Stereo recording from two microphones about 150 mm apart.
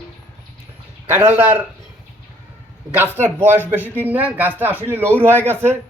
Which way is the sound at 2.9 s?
15° right (ahead or behind).